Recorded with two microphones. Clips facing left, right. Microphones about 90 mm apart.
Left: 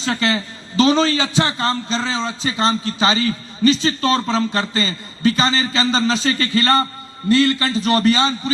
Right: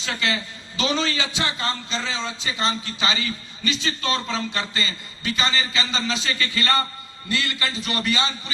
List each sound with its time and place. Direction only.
0.0 s a man's voice: 35° left (ahead or behind)